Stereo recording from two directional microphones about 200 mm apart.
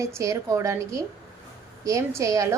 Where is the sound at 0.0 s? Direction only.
15° right (ahead or behind).